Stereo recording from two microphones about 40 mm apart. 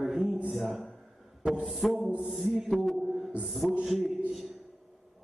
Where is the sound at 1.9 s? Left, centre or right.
Right.